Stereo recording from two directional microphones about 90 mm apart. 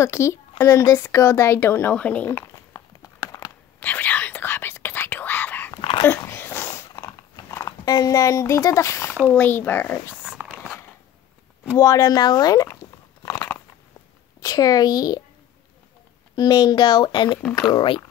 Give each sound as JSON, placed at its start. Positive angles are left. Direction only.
{"t": 0.0, "sound": "speech", "side_deg": 30}
{"t": 2.2, "sound": "crumpling", "side_deg": 30}
{"t": 3.8, "sound": "whispering", "side_deg": 20}
{"t": 5.8, "sound": "dog", "side_deg": 90}
{"t": 6.0, "sound": "a sound", "side_deg": 25}
{"t": 7.5, "sound": "speech", "side_deg": 40}
{"t": 10.2, "sound": "a sound", "side_deg": -5}
{"t": 11.8, "sound": "speech", "side_deg": 40}
{"t": 13.2, "sound": "a sound", "side_deg": 35}
{"t": 14.4, "sound": "a woman's voice", "side_deg": 45}
{"t": 16.3, "sound": "speech", "side_deg": 45}